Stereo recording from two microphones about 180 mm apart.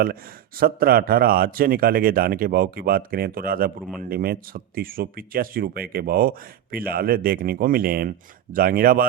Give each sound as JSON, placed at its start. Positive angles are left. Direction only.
{"t": 0.6, "sound": "a man's voice", "side_deg": -55}